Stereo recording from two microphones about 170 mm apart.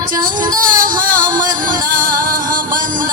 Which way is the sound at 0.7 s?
50° right (ahead or behind).